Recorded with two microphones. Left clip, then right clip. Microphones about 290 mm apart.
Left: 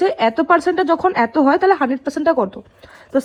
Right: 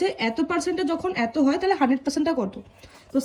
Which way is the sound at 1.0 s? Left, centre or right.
Left.